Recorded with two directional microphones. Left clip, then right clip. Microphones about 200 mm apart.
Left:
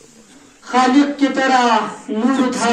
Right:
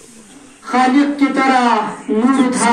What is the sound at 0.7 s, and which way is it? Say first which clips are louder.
A man's voice: right 1 dB; 15° left (ahead or behind).